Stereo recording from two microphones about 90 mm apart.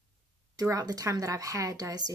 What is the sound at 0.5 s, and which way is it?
Speech, 45° right (ahead or behind).